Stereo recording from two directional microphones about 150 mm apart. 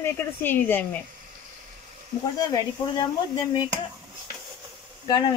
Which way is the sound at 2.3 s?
25° left (ahead or behind).